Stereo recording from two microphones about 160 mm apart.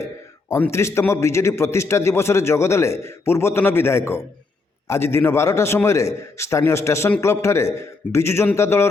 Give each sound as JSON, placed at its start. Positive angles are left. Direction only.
{"t": 0.0, "sound": "a man's voice", "side_deg": 10}